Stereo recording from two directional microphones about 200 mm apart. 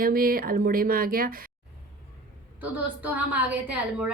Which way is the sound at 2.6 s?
10° right (ahead or behind).